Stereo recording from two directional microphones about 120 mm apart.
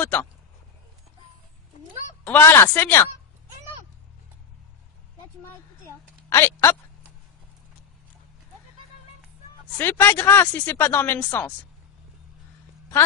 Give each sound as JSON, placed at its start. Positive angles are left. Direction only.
{"t": 0.0, "sound": "a woman's voice", "side_deg": 15}
{"t": 2.2, "sound": "a woman's voice", "side_deg": 15}
{"t": 6.2, "sound": "speech", "side_deg": 20}
{"t": 9.8, "sound": "speech", "side_deg": 20}